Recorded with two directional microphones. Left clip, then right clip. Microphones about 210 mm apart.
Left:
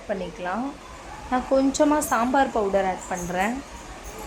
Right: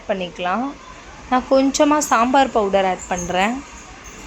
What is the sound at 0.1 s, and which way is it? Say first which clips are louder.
Speech: right 7 dB; 15° right (ahead or behind).